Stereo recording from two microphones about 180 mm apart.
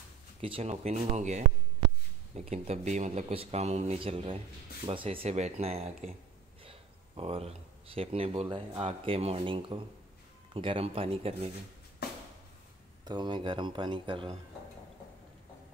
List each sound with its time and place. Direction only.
0.4 s speech: 35° right (ahead or behind)
13.0 s speech: 25° right (ahead or behind)